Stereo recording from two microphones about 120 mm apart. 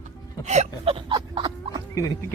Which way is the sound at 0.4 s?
75° right (ahead or behind).